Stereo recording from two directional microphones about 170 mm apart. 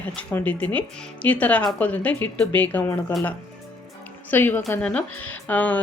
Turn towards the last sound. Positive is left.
turn(degrees=10)  # may be behind; listen again after turning